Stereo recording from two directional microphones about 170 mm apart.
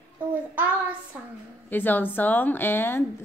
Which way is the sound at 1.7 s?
10° left (ahead or behind).